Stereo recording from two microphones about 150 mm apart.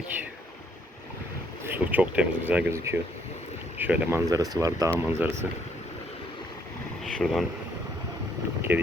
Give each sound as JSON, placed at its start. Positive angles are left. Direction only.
{"t": 1.6, "sound": "speech", "side_deg": -10}
{"t": 4.3, "sound": "speech", "side_deg": -25}
{"t": 7.0, "sound": "speech", "side_deg": 0}
{"t": 8.7, "sound": "speech", "side_deg": -15}